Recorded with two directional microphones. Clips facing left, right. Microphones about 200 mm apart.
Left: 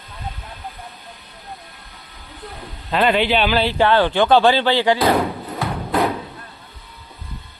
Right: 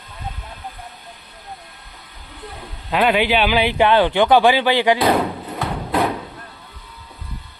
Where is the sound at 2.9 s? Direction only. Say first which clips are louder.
Even; 10° right (ahead or behind).